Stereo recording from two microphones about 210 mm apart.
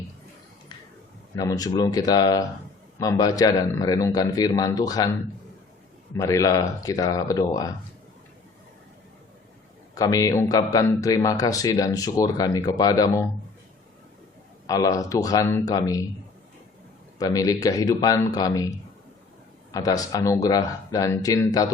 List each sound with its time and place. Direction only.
1.4 s a man's voice: 15° left (ahead or behind)
6.1 s a man's voice: 15° left (ahead or behind)
9.9 s a man's voice: 15° left (ahead or behind)
14.7 s a man's voice: 15° left (ahead or behind)
17.2 s a man's voice: 15° left (ahead or behind)
19.7 s a man's voice: 15° left (ahead or behind)